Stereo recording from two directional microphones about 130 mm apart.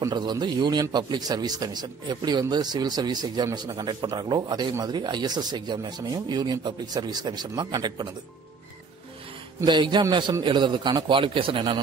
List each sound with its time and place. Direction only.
0.1 s a man's voice: 35° right (ahead or behind)
9.7 s a man's voice: 35° right (ahead or behind)